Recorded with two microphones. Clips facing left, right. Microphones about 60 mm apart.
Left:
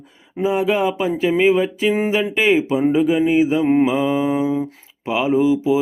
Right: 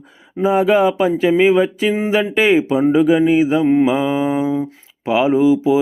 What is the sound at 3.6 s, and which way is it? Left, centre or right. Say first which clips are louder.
Mantra: right 2 dB; centre.